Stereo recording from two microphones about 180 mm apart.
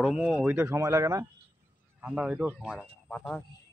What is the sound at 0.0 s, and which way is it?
Speech, 5° right (ahead or behind).